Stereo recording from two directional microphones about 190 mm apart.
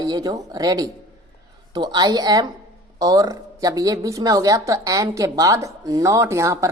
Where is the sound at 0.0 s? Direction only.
20° right (ahead or behind).